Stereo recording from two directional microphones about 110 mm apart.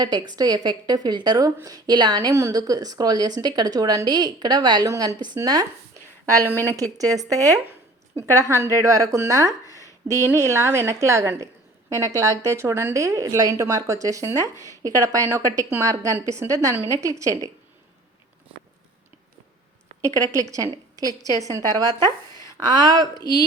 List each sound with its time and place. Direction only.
0.0 s a woman's voice: 40° right (ahead or behind)
6.7 s a woman's voice: 30° right (ahead or behind)
9.6 s a sound: 30° left (ahead or behind)
10.1 s a woman's voice: 25° right (ahead or behind)
20.0 s a woman's voice: 30° right (ahead or behind)